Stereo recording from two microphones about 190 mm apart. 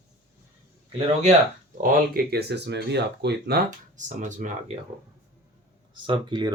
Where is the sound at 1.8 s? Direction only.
55° right (ahead or behind).